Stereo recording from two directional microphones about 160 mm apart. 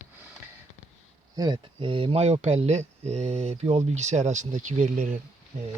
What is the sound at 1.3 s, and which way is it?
Speech, 25° right (ahead or behind).